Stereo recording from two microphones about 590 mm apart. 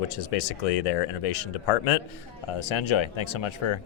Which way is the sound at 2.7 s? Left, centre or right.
Left.